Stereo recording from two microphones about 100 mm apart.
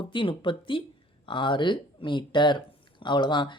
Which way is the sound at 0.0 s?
55° left (ahead or behind).